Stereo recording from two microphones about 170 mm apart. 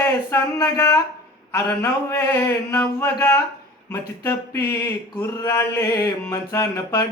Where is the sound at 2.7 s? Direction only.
15° left (ahead or behind).